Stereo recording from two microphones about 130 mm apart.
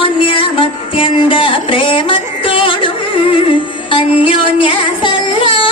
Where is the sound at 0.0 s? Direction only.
40° left (ahead or behind).